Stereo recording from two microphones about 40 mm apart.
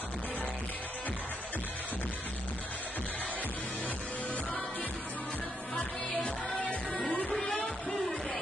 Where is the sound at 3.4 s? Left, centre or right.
Left.